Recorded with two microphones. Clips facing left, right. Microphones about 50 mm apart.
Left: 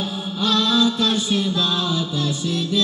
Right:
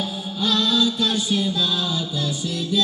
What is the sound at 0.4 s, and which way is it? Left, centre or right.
Music, left.